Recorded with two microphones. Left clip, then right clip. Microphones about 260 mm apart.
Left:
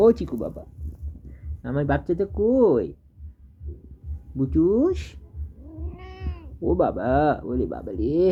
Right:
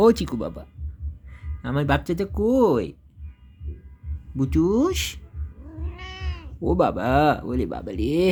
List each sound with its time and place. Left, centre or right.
0.0 s speech: right
1.6 s speech: right
4.4 s speech: right
5.8 s cat: centre
6.6 s speech: right